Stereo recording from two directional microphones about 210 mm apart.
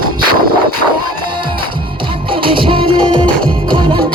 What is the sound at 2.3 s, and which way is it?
Music, 25° right (ahead or behind).